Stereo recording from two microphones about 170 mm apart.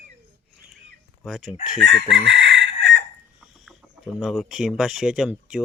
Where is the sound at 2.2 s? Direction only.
90° right.